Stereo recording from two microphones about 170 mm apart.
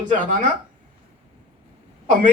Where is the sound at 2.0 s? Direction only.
45° right (ahead or behind).